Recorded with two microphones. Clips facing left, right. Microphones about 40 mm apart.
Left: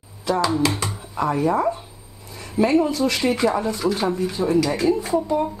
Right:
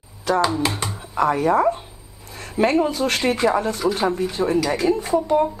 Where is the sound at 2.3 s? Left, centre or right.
Right.